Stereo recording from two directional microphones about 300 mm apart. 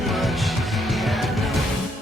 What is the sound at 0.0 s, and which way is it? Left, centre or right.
Music, centre.